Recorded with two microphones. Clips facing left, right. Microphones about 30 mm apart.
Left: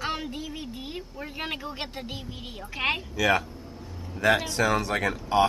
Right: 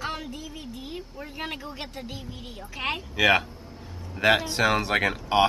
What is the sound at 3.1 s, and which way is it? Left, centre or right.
Speech, right.